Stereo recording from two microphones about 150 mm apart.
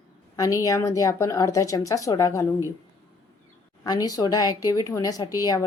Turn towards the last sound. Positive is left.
turn(degrees=25)  # may be behind; listen again after turning